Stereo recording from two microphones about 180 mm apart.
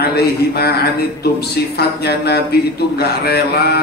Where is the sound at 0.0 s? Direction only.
60° left (ahead or behind).